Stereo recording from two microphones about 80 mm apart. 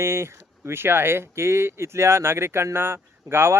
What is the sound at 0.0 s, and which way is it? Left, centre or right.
Speech, right.